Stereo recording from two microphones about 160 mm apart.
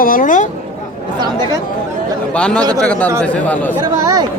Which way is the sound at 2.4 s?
5° left (ahead or behind).